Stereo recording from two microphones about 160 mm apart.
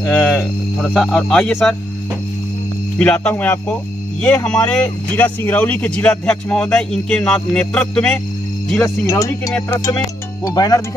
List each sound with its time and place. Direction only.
0.0 s speech: 10° left (ahead or behind)
3.0 s speech: 10° left (ahead or behind)
8.8 s speech: 20° left (ahead or behind)